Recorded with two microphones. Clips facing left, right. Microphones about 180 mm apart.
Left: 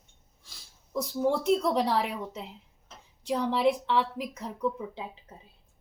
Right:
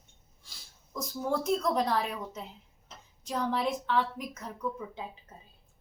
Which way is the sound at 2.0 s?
15° left (ahead or behind).